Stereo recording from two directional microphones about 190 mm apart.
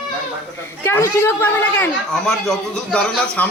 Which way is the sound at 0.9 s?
15° left (ahead or behind).